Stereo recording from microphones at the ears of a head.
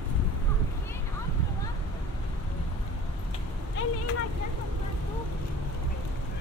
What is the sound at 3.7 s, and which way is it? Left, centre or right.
Vehicle, left.